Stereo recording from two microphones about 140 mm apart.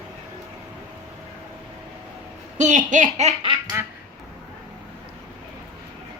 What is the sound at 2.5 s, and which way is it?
Speech, 60° right (ahead or behind).